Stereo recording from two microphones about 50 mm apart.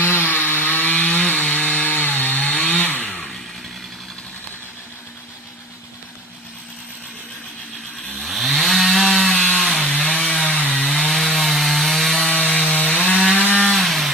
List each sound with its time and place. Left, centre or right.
0.0 s wood: left
3.1 s chainsaw: centre
8.2 s chainsaw: centre
9.7 s chainsaw: left
10.7 s wood: centre
12.3 s wood: left
13.7 s chainsaw: centre